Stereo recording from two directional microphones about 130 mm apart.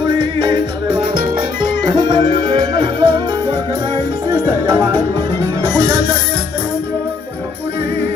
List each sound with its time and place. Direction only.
0.4 s music: 35° right (ahead or behind)
5.6 s music: 30° right (ahead or behind)